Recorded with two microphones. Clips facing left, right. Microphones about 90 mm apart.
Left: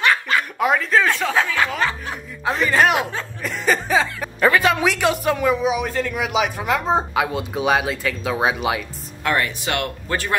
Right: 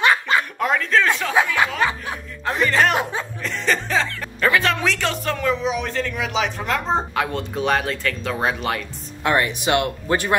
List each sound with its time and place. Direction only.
0.0 s chuckle: 20° right (ahead or behind)
0.6 s a man's voice: 5° left (ahead or behind)
1.3 s speech: 15° right (ahead or behind)
2.6 s a man's voice: 10° left (ahead or behind)
9.2 s speech: 20° right (ahead or behind)